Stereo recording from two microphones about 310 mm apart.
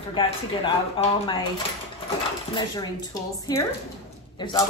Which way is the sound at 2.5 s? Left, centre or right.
Centre.